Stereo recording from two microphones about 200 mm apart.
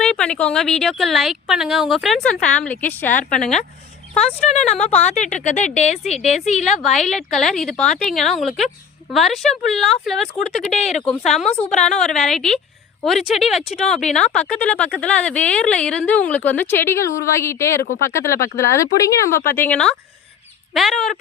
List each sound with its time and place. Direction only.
0.0 s speech: 5° left (ahead or behind)
3.4 s speech: 35° left (ahead or behind)
7.1 s speech: centre (ahead or behind)
10.8 s speech: 35° left (ahead or behind)
11.0 s speech: 5° left (ahead or behind)